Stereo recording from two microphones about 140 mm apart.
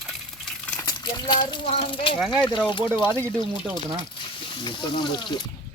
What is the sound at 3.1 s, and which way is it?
Speech, 10° left (ahead or behind).